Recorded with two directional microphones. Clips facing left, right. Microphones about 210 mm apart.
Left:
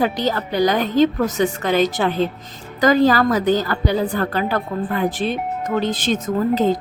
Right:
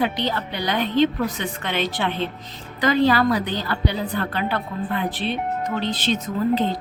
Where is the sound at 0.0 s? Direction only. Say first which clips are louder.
Left 4 dB; 40° left (ahead or behind).